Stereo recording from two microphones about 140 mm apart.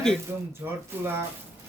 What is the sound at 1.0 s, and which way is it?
Speech, 15° right (ahead or behind).